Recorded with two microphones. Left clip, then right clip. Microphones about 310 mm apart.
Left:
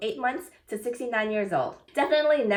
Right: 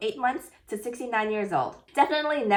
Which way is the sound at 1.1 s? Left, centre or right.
Centre.